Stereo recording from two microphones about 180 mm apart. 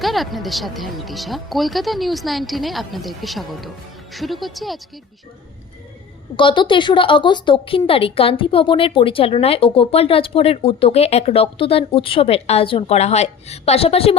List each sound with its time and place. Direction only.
0.0 s speech: centre (ahead or behind)
6.3 s a woman's voice: 25° left (ahead or behind)